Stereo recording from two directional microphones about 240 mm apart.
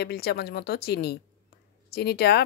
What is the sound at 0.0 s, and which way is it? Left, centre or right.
Speech, left.